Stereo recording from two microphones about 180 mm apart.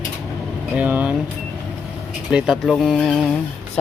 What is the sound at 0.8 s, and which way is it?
Speech, 10° right (ahead or behind).